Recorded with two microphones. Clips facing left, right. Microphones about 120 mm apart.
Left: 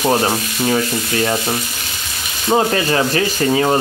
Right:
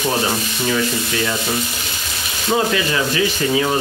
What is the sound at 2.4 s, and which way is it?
Sanding, 40° left (ahead or behind).